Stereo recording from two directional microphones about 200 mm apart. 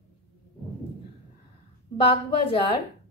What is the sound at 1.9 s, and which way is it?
Speech, 25° left (ahead or behind).